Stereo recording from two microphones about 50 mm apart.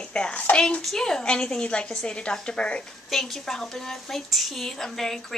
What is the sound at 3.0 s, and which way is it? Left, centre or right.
Speech, centre.